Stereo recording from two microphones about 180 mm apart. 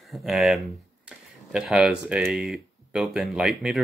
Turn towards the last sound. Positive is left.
turn(degrees=-5)  # may be behind; listen again after turning